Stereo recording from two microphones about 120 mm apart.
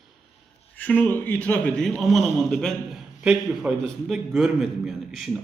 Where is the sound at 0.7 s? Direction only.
15° left (ahead or behind).